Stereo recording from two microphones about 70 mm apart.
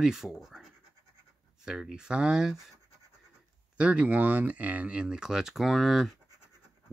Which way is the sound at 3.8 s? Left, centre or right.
Centre.